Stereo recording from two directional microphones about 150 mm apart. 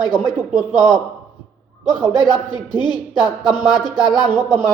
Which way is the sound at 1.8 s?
30° left (ahead or behind).